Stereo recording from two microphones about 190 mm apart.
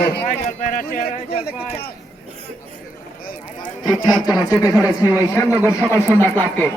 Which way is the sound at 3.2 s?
45° left (ahead or behind).